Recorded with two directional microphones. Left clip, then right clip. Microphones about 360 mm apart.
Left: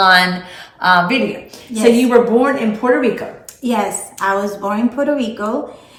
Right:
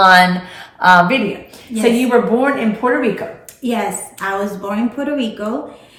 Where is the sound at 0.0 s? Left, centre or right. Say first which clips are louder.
Right 2 dB; centre.